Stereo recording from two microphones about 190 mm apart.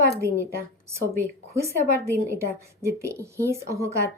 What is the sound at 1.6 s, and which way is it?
A woman's voice, 15° right (ahead or behind).